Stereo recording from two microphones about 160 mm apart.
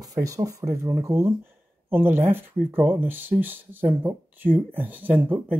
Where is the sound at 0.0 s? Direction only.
20° right (ahead or behind).